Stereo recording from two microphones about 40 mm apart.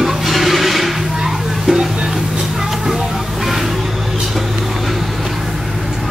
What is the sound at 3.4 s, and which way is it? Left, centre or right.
Vehicle, centre.